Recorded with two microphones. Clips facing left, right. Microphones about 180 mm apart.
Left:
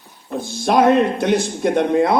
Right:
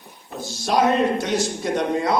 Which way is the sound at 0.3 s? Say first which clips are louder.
Left 5 dB; 55° left (ahead or behind).